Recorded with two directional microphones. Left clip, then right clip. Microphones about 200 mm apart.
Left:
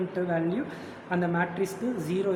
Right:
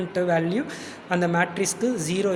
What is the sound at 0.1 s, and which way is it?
Speech, 40° right (ahead or behind).